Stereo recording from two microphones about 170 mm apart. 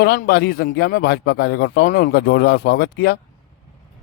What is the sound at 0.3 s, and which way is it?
Speech, 70° left (ahead or behind).